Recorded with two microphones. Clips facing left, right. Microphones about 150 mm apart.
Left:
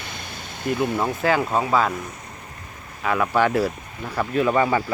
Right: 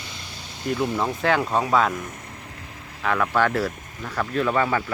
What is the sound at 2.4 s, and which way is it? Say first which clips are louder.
Vehicle: even; 90° right.